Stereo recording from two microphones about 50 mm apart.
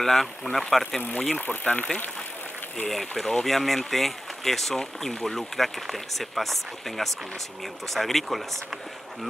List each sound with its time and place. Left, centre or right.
0.0 s speech: centre
1.4 s speech: left
2.9 s speech: centre